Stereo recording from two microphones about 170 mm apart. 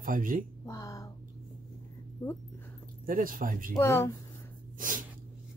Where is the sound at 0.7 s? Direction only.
20° left (ahead or behind).